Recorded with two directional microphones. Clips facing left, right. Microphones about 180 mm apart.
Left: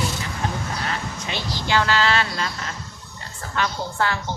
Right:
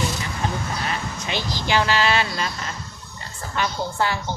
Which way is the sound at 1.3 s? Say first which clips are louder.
Right 1 dB; 15° right (ahead or behind).